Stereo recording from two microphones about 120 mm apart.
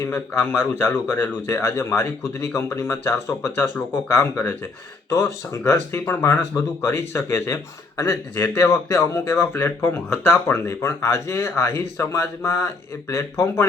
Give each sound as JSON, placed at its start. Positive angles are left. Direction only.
{"t": 0.6, "sound": "speech", "side_deg": 15}